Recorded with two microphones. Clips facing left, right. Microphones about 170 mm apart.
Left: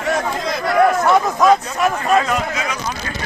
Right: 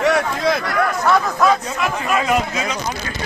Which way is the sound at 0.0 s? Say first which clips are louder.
Right 3 dB; 70° right (ahead or behind).